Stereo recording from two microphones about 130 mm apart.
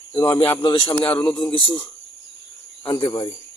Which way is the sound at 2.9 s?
25° left (ahead or behind).